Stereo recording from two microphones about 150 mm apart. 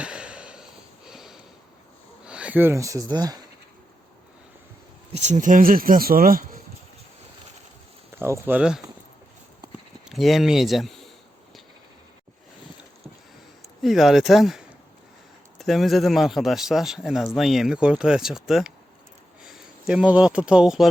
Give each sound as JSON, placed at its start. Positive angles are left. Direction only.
{"t": 0.0, "sound": "a sound", "side_deg": -5}
{"t": 2.2, "sound": "speech", "side_deg": -5}
{"t": 5.1, "sound": "speech", "side_deg": -50}
{"t": 8.1, "sound": "speech", "side_deg": -15}
{"t": 10.1, "sound": "speech", "side_deg": 0}
{"t": 13.8, "sound": "a man's voice", "side_deg": 0}